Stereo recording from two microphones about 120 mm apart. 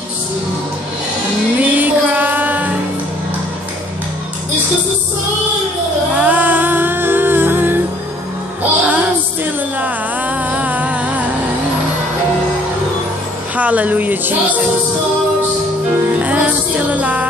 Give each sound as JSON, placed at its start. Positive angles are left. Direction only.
{"t": 1.6, "sound": "music", "side_deg": -15}
{"t": 6.1, "sound": "music", "side_deg": -15}
{"t": 8.8, "sound": "music", "side_deg": -15}
{"t": 13.6, "sound": "music", "side_deg": -10}
{"t": 16.2, "sound": "music", "side_deg": -10}